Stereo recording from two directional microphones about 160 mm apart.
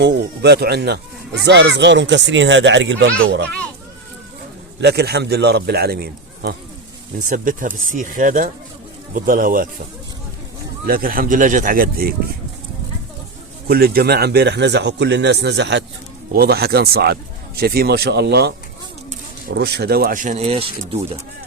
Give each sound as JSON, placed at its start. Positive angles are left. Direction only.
{"t": 0.0, "sound": "speech", "side_deg": -90}
{"t": 4.8, "sound": "speech", "side_deg": -90}
{"t": 7.2, "sound": "speech", "side_deg": -55}
{"t": 10.8, "sound": "speech", "side_deg": -65}
{"t": 13.7, "sound": "speech", "side_deg": -75}
{"t": 16.3, "sound": "speech", "side_deg": -75}